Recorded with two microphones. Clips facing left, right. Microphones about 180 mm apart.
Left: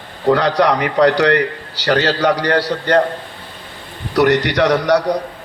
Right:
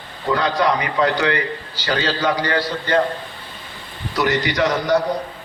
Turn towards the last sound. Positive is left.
turn(degrees=75)  # may be behind; listen again after turning